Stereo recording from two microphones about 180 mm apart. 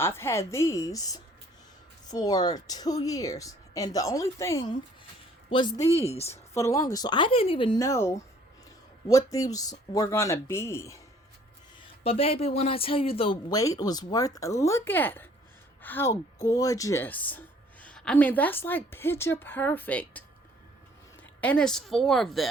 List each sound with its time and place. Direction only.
0.0 s speech: 15° left (ahead or behind)
5.9 s speech: 35° left (ahead or behind)
6.3 s speech: 15° left (ahead or behind)
7.8 s speech: 15° left (ahead or behind)
12.0 s speech: 35° left (ahead or behind); by 20.2 s 10° left (ahead or behind)
21.4 s speech: 5° left (ahead or behind)